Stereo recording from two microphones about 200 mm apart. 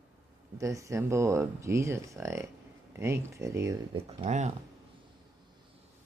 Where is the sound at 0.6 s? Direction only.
15° right (ahead or behind).